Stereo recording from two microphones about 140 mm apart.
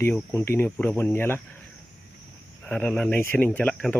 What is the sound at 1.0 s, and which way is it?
Speech, 15° left (ahead or behind).